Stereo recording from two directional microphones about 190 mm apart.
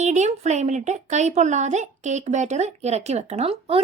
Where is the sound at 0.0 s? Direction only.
35° right (ahead or behind).